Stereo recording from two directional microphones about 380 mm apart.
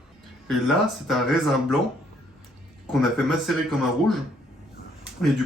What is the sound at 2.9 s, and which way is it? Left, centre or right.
Speech, centre.